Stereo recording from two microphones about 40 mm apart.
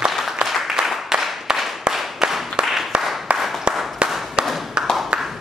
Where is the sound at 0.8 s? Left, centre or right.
Centre.